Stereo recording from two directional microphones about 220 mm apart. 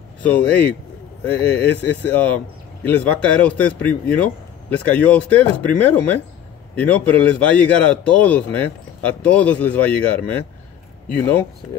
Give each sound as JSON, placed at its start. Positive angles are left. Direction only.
{"t": 0.2, "sound": "speech", "side_deg": 5}